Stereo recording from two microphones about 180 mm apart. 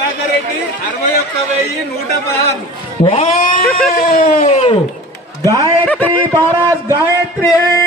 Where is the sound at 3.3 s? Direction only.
50° left (ahead or behind).